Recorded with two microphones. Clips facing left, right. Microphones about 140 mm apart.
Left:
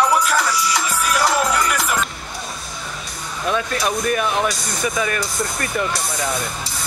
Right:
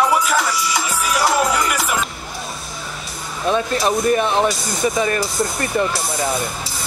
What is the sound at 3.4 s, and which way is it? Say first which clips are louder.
Speech: right 3 dB; 30° right (ahead or behind).